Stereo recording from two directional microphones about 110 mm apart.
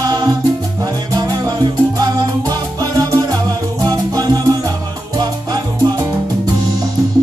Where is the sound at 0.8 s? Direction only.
35° right (ahead or behind).